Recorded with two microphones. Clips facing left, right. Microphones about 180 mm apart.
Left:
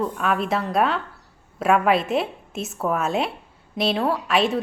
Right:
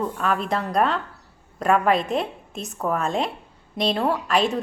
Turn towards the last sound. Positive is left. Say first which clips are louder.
# even
turn(degrees=0)  # may be behind; listen again after turning